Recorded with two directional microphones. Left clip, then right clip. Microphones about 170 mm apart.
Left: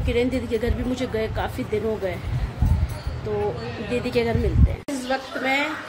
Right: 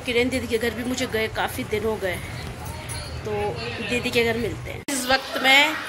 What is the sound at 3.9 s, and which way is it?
A woman's voice, 10° left (ahead or behind).